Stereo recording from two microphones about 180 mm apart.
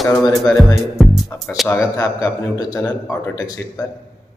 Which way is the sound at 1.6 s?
15° left (ahead or behind).